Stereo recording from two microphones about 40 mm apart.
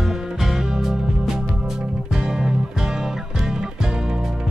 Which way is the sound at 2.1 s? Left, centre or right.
Centre.